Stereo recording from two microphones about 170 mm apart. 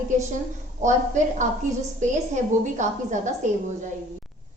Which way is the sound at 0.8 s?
45° right (ahead or behind).